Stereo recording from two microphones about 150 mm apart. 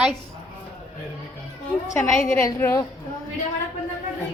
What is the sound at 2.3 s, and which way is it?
Speech, 20° left (ahead or behind).